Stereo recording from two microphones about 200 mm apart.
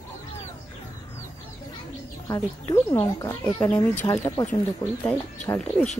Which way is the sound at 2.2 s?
15° left (ahead or behind).